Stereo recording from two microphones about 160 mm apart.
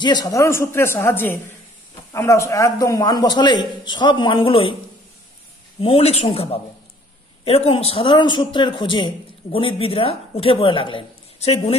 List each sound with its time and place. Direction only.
0.0 s a man's voice: 25° left (ahead or behind)
5.8 s a man's voice: 35° left (ahead or behind)